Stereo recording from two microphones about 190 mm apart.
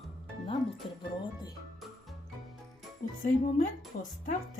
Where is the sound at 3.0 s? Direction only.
40° left (ahead or behind).